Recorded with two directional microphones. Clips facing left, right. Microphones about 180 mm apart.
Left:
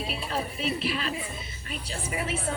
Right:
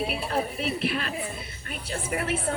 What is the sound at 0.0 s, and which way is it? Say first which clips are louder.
A woman's voice: right 4 dB; 55° right (ahead or behind).